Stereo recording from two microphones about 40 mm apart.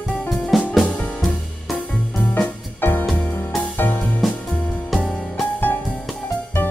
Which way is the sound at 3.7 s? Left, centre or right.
Left.